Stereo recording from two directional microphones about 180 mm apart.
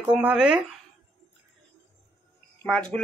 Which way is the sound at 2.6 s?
5° left (ahead or behind).